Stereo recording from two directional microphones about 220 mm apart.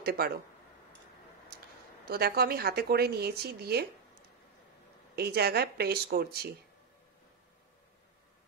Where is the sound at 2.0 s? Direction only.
45° right (ahead or behind).